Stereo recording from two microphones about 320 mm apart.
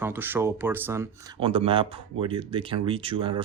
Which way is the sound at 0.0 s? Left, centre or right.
Centre.